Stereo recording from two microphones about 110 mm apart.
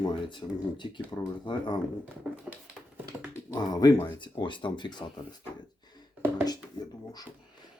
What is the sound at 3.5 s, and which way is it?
Speech, 35° left (ahead or behind).